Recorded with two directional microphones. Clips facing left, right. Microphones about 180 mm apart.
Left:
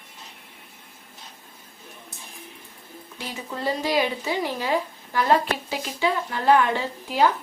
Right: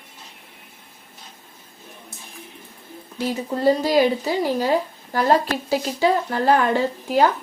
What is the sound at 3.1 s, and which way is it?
Speech, 40° right (ahead or behind).